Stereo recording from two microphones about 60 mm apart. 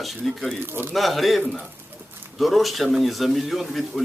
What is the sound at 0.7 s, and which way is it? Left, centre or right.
Speech, right.